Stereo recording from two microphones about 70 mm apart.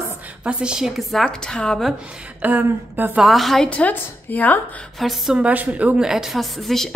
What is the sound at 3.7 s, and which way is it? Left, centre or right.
Speech, left.